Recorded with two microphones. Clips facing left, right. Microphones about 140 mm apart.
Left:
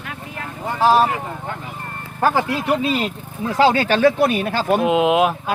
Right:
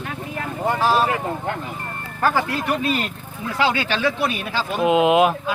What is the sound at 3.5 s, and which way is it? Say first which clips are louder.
Speech: left 6 dB; 40° left (ahead or behind).